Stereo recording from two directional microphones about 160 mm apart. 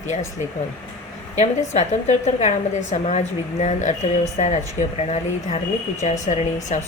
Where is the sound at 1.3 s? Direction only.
45° left (ahead or behind).